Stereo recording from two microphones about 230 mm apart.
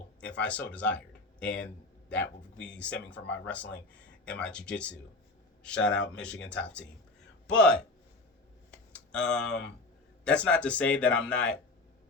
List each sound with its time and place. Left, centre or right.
0.2 s speech: centre
9.1 s speech: centre